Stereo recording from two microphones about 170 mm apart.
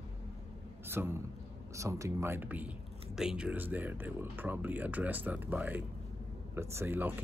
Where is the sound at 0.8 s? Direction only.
15° right (ahead or behind).